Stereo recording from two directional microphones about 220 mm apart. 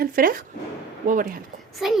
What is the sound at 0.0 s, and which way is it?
Speech, 40° right (ahead or behind).